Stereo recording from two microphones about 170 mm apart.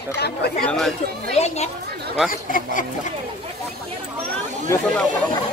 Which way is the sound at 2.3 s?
55° left (ahead or behind).